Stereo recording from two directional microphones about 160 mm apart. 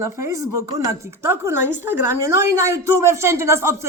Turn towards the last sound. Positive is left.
turn(degrees=-15)  # may be behind; listen again after turning